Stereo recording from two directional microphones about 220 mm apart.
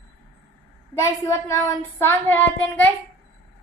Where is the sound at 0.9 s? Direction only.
15° left (ahead or behind).